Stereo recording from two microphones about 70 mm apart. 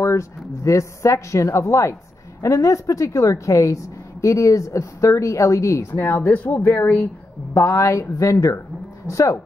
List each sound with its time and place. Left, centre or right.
0.0 s a woman's voice: left
5.9 s speech: left
7.5 s a woman's voice: left